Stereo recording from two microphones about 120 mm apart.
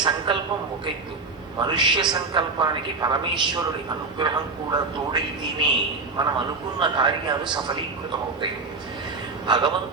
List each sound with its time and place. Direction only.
0.3 s a sound: 45° right (ahead or behind)
1.5 s a man's voice: 40° right (ahead or behind)
9.5 s a man's voice: 40° right (ahead or behind)